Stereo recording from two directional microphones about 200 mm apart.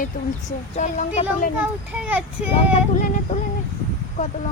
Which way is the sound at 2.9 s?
35° left (ahead or behind).